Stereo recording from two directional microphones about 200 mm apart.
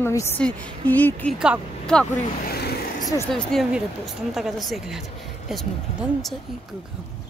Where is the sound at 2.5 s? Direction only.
55° left (ahead or behind).